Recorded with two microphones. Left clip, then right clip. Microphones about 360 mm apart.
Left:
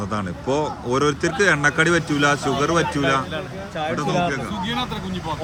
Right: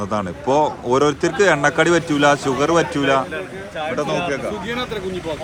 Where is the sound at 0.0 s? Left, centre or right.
Centre.